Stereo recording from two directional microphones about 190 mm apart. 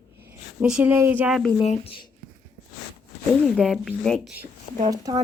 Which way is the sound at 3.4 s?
5° left (ahead or behind).